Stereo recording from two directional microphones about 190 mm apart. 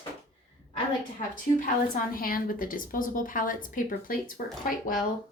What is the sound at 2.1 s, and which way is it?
Speech, 50° left (ahead or behind).